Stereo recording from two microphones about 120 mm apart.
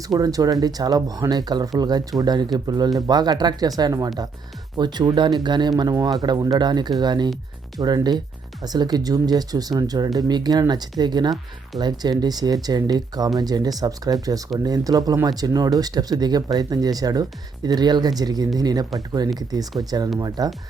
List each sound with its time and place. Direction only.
0.1 s speech: 30° right (ahead or behind)